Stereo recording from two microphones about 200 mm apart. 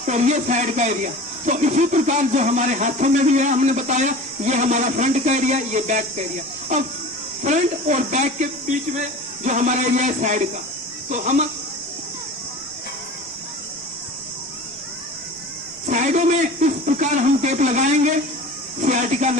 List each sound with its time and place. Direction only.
0.0 s speech: 35° right (ahead or behind)
15.9 s speech: 40° right (ahead or behind)